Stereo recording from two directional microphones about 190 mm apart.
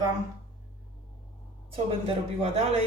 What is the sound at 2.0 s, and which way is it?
Speech, 30° right (ahead or behind).